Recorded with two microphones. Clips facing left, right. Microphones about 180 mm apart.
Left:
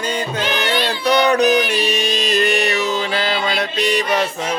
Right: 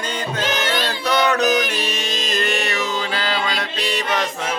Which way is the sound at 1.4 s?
40° right (ahead or behind).